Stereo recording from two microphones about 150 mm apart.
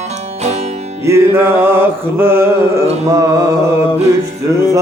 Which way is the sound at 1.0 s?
15° right (ahead or behind).